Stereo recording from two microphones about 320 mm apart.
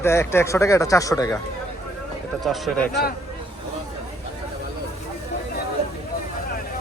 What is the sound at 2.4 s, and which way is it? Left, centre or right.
Speech, centre.